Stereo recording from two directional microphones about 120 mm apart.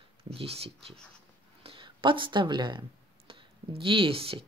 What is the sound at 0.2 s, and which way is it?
Speech, 55° right (ahead or behind).